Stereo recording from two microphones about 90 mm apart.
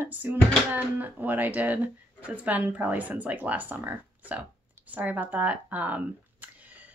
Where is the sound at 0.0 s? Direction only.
20° right (ahead or behind).